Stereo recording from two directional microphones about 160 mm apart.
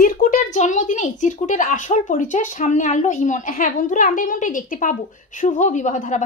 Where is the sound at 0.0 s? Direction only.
55° left (ahead or behind).